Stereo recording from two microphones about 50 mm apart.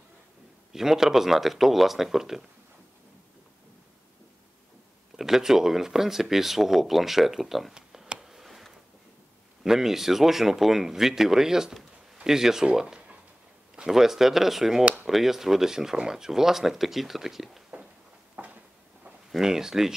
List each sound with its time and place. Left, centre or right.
0.7 s speech: centre
5.1 s speech: centre
7.7 s a sound: centre
9.6 s speech: centre
18.3 s a sound: right
19.3 s speech: centre